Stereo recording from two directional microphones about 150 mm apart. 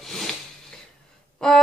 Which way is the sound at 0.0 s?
Centre (ahead or behind).